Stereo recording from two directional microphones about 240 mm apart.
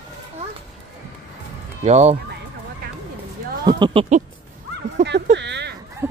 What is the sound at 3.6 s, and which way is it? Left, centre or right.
Speech, centre.